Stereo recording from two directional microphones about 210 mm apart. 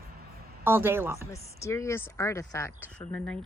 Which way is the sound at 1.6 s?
15° left (ahead or behind).